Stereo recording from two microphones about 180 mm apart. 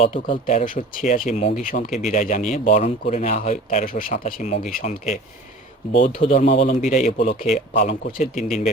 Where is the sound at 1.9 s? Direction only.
Centre (ahead or behind).